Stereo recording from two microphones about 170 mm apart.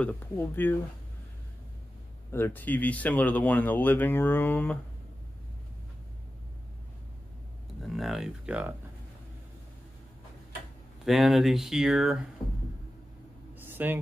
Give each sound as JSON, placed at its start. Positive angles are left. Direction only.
{"t": 0.0, "sound": "speech", "side_deg": 10}
{"t": 2.3, "sound": "speech", "side_deg": 10}
{"t": 7.8, "sound": "speech", "side_deg": 0}
{"t": 11.1, "sound": "speech", "side_deg": 0}
{"t": 12.4, "sound": "speech", "side_deg": 25}
{"t": 13.6, "sound": "a sound", "side_deg": -10}